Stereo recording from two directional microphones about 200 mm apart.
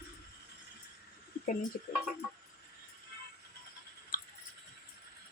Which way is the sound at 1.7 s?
40° left (ahead or behind).